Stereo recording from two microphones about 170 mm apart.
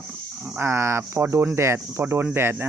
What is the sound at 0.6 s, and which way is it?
Speech, 15° right (ahead or behind).